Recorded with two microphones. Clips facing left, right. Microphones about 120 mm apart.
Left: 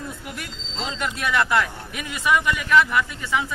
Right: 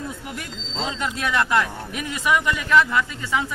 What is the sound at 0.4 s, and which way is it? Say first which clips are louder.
Speech: right 2 dB; 25° right (ahead or behind).